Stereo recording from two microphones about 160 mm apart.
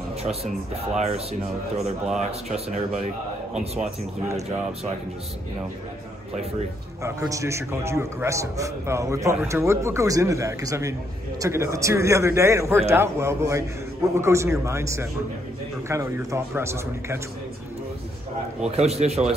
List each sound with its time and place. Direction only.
0.2 s speech: 40° right (ahead or behind)
2.0 s speech: 5° right (ahead or behind)
7.0 s a man's voice: 20° right (ahead or behind)
18.8 s speech: 40° right (ahead or behind)